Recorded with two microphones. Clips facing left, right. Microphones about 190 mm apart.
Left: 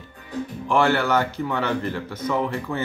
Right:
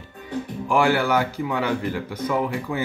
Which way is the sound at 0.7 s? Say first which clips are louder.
Even; 10° right (ahead or behind).